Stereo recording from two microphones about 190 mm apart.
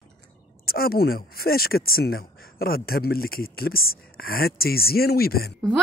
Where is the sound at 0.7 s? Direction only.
50° left (ahead or behind).